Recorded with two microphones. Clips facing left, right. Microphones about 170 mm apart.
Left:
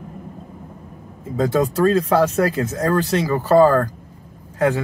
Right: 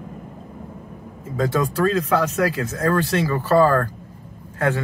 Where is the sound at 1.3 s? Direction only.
30° left (ahead or behind).